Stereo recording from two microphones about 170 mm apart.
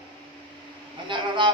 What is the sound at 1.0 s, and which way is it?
Speech, 30° right (ahead or behind).